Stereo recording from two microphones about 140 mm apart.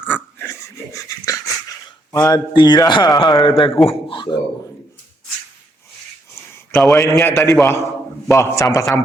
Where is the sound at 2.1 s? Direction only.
25° left (ahead or behind).